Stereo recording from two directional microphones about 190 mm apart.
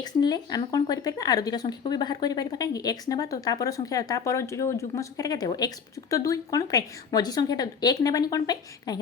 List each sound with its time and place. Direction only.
0.0 s speech: 20° left (ahead or behind)